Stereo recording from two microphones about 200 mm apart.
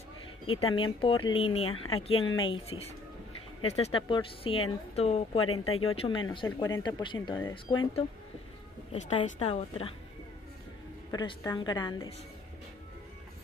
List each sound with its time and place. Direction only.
0.7 s speech: 25° left (ahead or behind)
1.6 s speech: 90° left
2.0 s a woman's voice: 30° left (ahead or behind)
5.4 s speech: 90° left
5.9 s speech: 25° left (ahead or behind)
6.4 s speech: 15° left (ahead or behind)
8.9 s speech: 35° left (ahead or behind)
11.1 s speech: 20° left (ahead or behind)